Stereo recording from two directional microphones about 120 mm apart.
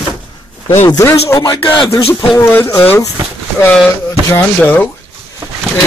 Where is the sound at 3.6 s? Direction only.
10° left (ahead or behind).